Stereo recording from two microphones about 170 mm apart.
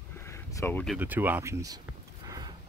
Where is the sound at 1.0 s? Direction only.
10° right (ahead or behind).